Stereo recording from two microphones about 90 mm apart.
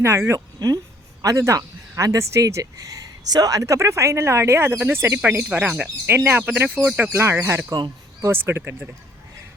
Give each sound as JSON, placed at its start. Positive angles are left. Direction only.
{"t": 0.0, "sound": "speech", "side_deg": -30}
{"t": 0.3, "sound": "speech", "side_deg": -45}